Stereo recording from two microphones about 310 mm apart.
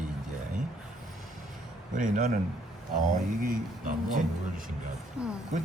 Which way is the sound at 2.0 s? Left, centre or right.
Right.